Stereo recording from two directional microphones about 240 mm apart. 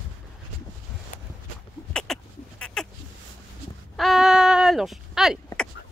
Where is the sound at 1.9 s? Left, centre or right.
Centre.